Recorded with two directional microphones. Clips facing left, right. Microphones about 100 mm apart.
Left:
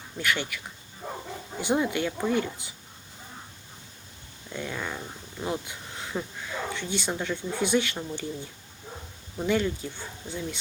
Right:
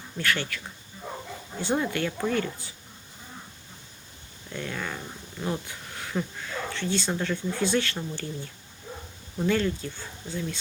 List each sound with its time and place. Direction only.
0.2 s speech: 15° left (ahead or behind)
2.3 s speech: 15° left (ahead or behind)
4.5 s speech: 10° left (ahead or behind)
9.4 s speech: 15° left (ahead or behind)